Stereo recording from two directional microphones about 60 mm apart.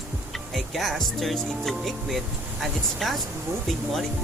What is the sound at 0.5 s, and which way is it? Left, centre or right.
Speech, centre.